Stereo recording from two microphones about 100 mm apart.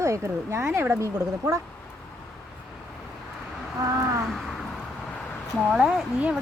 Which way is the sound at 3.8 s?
30° right (ahead or behind).